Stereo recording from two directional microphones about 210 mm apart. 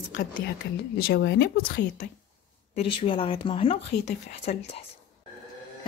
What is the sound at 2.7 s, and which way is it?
Speech, 25° left (ahead or behind).